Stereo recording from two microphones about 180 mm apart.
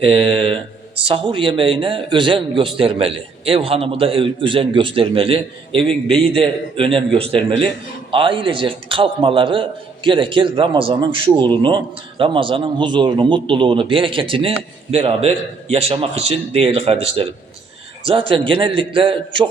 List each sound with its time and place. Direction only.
0.0 s a man's voice: 30° right (ahead or behind)
5.9 s a man's voice: 5° left (ahead or behind)
6.3 s a man's voice: 30° right (ahead or behind)